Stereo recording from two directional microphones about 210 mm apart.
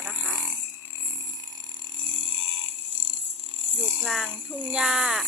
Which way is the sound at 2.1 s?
25° right (ahead or behind).